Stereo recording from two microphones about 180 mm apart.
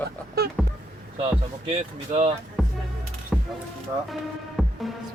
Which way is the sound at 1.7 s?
35° right (ahead or behind).